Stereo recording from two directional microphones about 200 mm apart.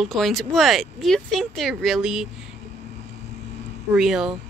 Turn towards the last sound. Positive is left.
turn(degrees=0)  # may be behind; listen again after turning